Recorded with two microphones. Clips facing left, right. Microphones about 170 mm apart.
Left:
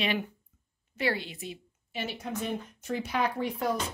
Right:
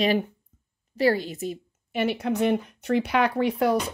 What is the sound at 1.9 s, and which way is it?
Speech, 65° right (ahead or behind).